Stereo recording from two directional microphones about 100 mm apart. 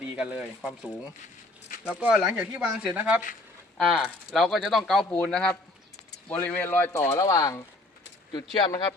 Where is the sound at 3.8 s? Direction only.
Centre (ahead or behind); by 6.9 s 20° left (ahead or behind).